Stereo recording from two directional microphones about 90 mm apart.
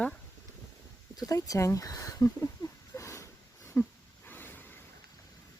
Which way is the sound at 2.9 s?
35° left (ahead or behind).